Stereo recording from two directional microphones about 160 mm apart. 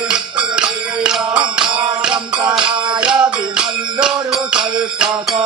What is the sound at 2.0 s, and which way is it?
Music, 5° right (ahead or behind).